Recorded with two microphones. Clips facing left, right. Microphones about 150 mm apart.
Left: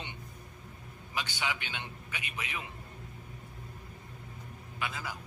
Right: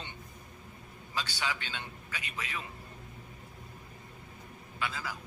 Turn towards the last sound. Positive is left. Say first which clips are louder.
# right 1 dB
turn(degrees=20)  # may be behind; listen again after turning